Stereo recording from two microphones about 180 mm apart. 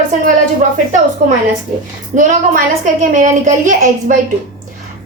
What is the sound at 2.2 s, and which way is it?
A woman's voice, 45° right (ahead or behind).